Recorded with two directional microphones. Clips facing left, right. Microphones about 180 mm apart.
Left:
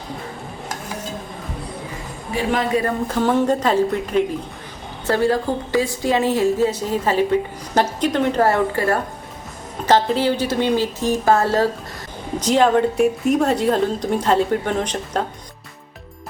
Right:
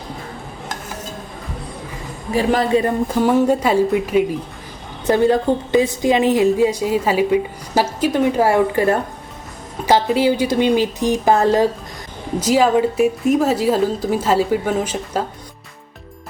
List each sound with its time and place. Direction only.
2.3 s a woman's voice: 35° right (ahead or behind)
2.7 s a woman's voice: 15° right (ahead or behind)
5.0 s a woman's voice: 20° right (ahead or behind)